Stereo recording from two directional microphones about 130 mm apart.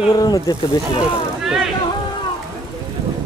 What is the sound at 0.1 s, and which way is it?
Speech, 30° left (ahead or behind).